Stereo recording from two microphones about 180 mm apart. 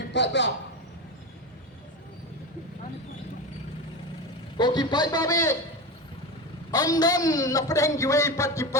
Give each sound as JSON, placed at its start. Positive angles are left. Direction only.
{"t": 0.1, "sound": "a man's voice", "side_deg": 80}
{"t": 4.5, "sound": "a man's voice", "side_deg": 25}
{"t": 6.7, "sound": "a man's voice", "side_deg": 20}